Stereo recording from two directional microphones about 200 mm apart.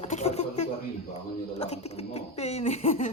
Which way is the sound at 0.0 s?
35° left (ahead or behind).